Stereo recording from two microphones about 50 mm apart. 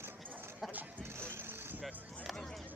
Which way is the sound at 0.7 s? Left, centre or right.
Right.